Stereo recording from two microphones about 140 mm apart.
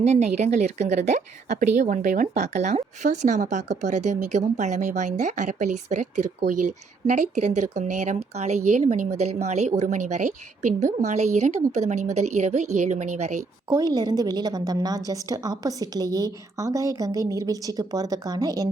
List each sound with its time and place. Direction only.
0.0 s speech: 55° right (ahead or behind)
13.9 s a woman's voice: 30° right (ahead or behind)